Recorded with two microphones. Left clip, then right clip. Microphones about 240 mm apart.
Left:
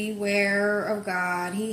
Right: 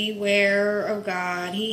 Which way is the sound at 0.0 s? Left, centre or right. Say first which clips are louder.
Right 4 dB; centre.